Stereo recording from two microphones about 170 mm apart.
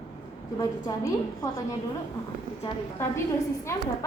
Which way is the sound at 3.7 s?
15° left (ahead or behind).